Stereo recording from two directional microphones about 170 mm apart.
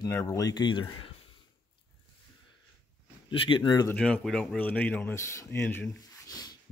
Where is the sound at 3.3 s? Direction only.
30° left (ahead or behind).